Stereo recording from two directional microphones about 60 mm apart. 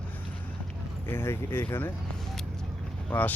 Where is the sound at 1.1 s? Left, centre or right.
Left.